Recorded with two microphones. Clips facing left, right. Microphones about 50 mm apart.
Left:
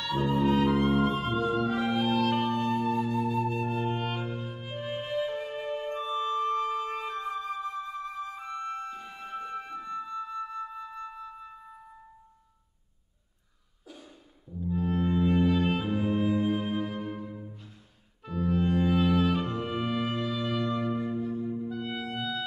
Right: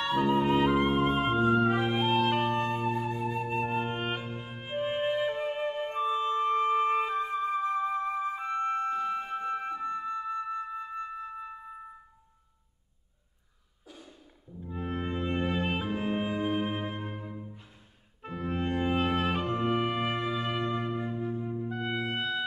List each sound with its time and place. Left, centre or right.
0.0 s music: right
7.5 s flute: right
14.6 s music: right
18.2 s clarinet: right
21.0 s music: right
21.6 s clarinet: right